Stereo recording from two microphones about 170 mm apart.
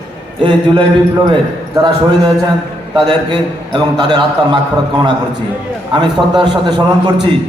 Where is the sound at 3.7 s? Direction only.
25° right (ahead or behind).